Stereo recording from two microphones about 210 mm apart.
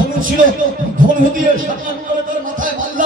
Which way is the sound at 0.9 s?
40° right (ahead or behind).